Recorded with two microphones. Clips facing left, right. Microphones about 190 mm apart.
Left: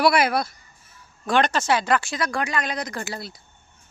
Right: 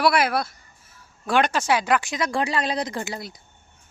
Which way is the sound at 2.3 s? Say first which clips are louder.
Right 5 dB; 30° right (ahead or behind).